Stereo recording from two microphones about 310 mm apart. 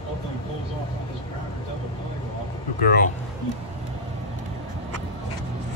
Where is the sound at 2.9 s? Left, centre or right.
Left.